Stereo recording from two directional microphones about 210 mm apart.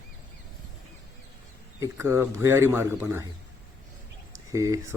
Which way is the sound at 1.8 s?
15° right (ahead or behind).